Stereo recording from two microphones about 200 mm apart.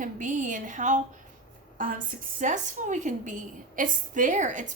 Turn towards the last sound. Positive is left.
turn(degrees=-40)  # may be behind; listen again after turning